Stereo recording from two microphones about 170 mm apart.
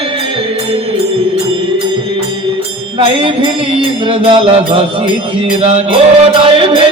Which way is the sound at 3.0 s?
30° right (ahead or behind).